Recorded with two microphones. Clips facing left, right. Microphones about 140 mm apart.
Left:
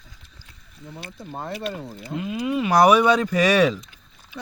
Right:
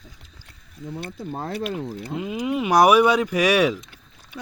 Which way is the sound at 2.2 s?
20° right (ahead or behind).